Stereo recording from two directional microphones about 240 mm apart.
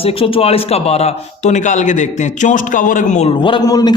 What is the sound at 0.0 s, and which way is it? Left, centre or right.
Speech, left.